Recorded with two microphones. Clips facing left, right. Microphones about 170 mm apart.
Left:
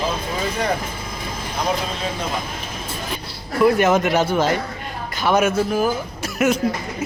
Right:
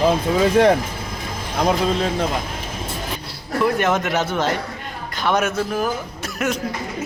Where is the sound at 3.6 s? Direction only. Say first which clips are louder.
Left 4 dB; 5° left (ahead or behind).